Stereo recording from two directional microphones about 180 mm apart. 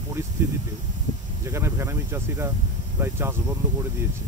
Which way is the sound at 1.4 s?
15° right (ahead or behind).